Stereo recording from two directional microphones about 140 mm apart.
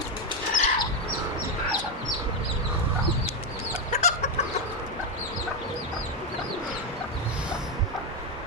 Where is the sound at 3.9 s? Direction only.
55° left (ahead or behind).